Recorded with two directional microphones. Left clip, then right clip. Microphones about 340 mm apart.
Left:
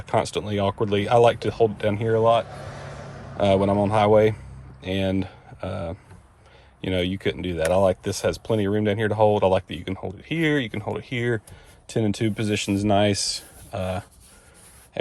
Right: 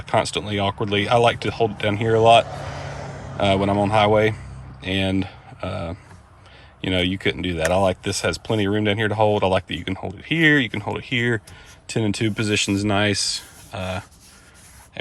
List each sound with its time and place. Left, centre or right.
0.0 s speech: centre
3.0 s a sound: right
3.3 s speech: centre